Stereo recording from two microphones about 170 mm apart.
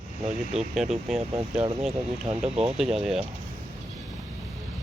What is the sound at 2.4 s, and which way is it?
Speech, 35° right (ahead or behind).